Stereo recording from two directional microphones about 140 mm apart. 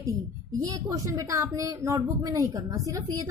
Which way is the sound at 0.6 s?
25° right (ahead or behind).